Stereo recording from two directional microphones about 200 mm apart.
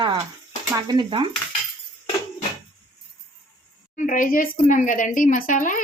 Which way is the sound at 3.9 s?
40° left (ahead or behind).